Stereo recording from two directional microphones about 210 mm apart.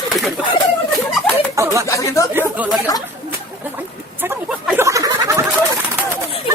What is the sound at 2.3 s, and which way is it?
Speech, 10° right (ahead or behind).